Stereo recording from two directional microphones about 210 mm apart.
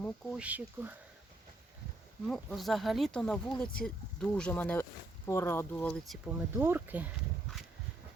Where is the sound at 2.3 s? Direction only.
Centre (ahead or behind).